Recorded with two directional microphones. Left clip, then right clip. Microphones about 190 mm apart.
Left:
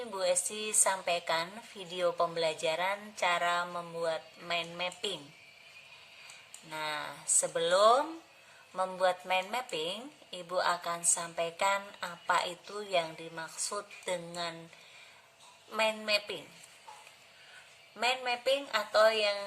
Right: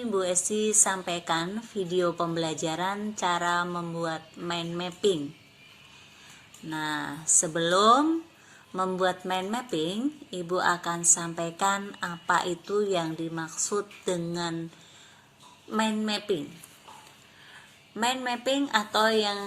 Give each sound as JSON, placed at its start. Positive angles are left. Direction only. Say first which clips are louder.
{"t": 0.1, "sound": "a woman's voice", "louder": "right 4 dB", "side_deg": 25}
{"t": 6.7, "sound": "a woman's voice", "louder": "right 5 dB", "side_deg": 20}
{"t": 15.7, "sound": "a woman's voice", "louder": "right 1 dB", "side_deg": 20}
{"t": 17.9, "sound": "a woman's voice", "louder": "right 3 dB", "side_deg": 20}
{"t": 19.1, "sound": "speech", "louder": "right 4 dB", "side_deg": 50}